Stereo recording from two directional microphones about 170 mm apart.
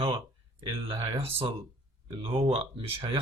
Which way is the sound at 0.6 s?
35° right (ahead or behind).